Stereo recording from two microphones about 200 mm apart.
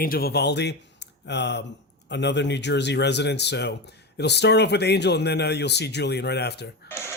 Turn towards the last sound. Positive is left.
turn(degrees=10)  # may be behind; listen again after turning